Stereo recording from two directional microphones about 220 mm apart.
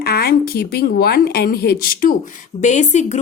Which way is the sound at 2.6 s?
35° left (ahead or behind).